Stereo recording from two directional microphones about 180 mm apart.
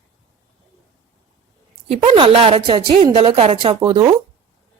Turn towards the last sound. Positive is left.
turn(degrees=-20)  # may be behind; listen again after turning